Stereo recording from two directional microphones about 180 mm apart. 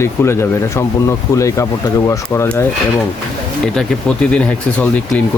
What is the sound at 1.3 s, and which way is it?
Speech, 15° left (ahead or behind).